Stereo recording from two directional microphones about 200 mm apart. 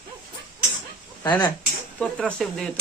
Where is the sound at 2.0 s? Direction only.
5° left (ahead or behind).